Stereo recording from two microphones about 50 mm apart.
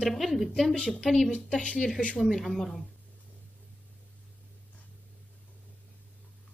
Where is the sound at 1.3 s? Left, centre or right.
Left.